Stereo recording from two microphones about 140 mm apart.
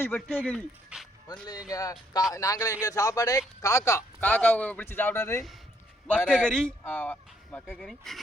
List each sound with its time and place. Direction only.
0.0 s speech: 15° left (ahead or behind)
0.9 s music: 5° right (ahead or behind)
1.7 s speech: 25° left (ahead or behind)
6.1 s speech: 5° left (ahead or behind)
7.7 s speech: centre (ahead or behind)